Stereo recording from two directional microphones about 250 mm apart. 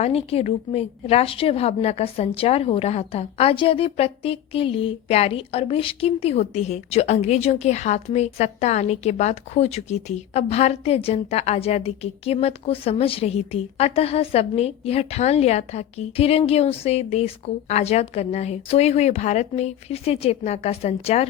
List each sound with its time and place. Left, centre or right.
0.0 s a woman's voice: left